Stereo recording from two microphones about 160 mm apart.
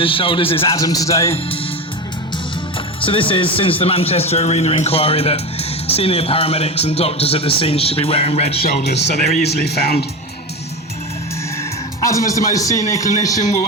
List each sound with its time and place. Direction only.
0.0 s a man's voice: 35° left (ahead or behind)
0.7 s a man's voice: 25° left (ahead or behind)
3.0 s a man's voice: 35° left (ahead or behind)
8.6 s speech: 90° left
12.0 s a man's voice: 20° left (ahead or behind)